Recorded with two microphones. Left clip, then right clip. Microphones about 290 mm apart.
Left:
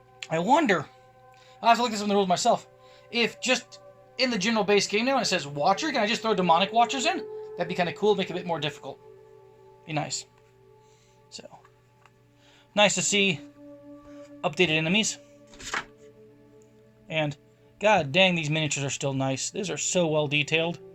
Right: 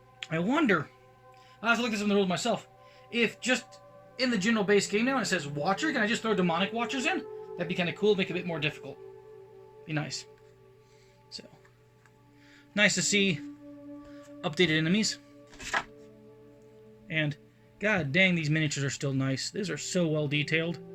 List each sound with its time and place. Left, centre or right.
0.2 s speech: centre
1.9 s speech: centre
11.3 s speech: centre
12.7 s speech: centre
17.1 s speech: centre